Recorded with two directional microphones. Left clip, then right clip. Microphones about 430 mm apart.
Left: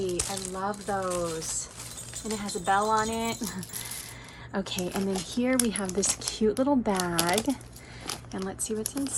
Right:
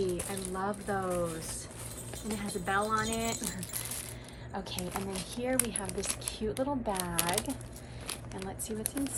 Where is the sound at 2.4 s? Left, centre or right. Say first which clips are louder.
Left 6 dB; centre.